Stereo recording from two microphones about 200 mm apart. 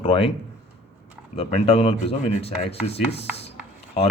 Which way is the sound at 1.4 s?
30° left (ahead or behind).